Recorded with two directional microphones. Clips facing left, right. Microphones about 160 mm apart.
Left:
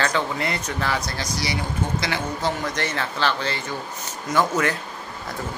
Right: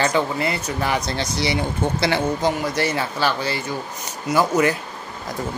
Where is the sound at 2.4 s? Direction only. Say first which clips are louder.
Right 4 dB; 10° right (ahead or behind).